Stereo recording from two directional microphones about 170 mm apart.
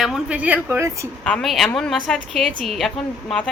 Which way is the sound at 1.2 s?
5° left (ahead or behind).